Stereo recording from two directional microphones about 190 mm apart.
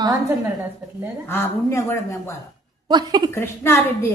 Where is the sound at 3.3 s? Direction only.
15° left (ahead or behind).